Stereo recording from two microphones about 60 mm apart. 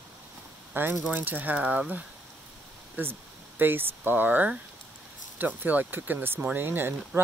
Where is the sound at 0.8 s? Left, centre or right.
Right.